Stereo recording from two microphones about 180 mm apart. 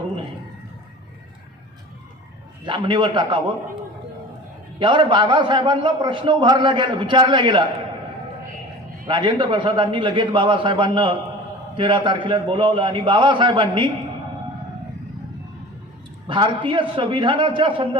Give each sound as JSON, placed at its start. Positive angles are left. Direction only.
{"t": 2.6, "sound": "a man's voice", "side_deg": -25}
{"t": 4.8, "sound": "a man's voice", "side_deg": -25}
{"t": 9.0, "sound": "a man's voice", "side_deg": -25}
{"t": 16.2, "sound": "a man's voice", "side_deg": -25}